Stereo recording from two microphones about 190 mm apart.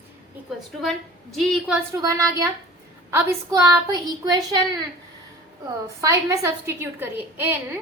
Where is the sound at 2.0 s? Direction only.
15° right (ahead or behind).